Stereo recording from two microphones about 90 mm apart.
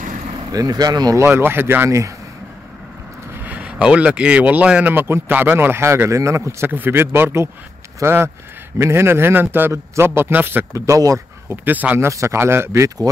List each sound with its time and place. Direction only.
0.5 s speech: 45° right (ahead or behind)
1.1 s speech: 25° right (ahead or behind)
1.9 s speech: 35° right (ahead or behind)
3.4 s speech: 15° right (ahead or behind)
10.9 s speech: 40° right (ahead or behind)
11.4 s speech: 20° right (ahead or behind)
12.1 s speech: 35° right (ahead or behind)